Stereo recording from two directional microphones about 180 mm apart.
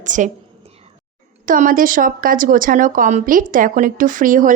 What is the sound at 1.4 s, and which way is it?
Speech, 50° right (ahead or behind).